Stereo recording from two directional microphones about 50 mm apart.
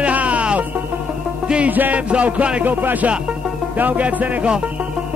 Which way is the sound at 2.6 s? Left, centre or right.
Right.